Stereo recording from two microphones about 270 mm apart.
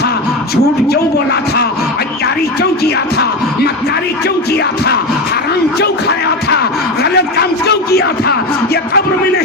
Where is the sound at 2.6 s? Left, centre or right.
Left.